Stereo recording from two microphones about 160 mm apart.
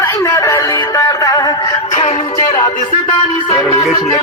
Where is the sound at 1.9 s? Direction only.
40° left (ahead or behind).